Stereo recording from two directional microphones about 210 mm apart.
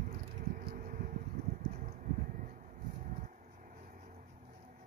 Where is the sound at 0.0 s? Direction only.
40° right (ahead or behind).